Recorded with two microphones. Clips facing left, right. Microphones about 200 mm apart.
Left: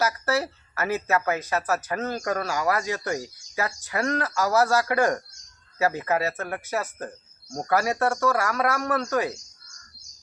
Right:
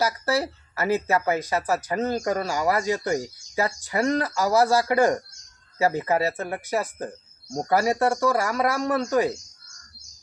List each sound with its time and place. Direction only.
0.0 s speech: 15° right (ahead or behind)